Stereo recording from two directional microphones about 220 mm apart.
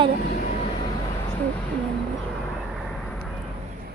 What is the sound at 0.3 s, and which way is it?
Vehicle, 30° left (ahead or behind).